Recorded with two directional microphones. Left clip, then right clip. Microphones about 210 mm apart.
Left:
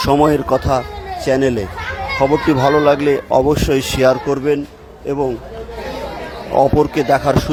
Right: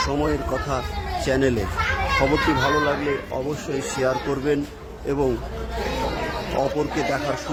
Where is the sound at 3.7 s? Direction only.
40° left (ahead or behind); by 4.6 s 25° left (ahead or behind).